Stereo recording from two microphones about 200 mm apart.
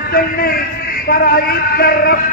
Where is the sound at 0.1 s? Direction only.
50° left (ahead or behind).